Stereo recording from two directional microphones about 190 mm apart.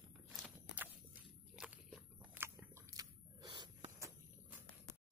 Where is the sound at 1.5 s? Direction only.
5° right (ahead or behind); by 4.1 s 25° right (ahead or behind).